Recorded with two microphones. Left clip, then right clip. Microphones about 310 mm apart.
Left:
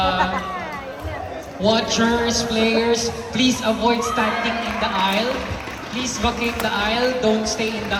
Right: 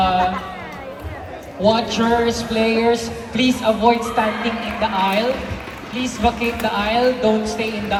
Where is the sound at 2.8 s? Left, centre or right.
Right.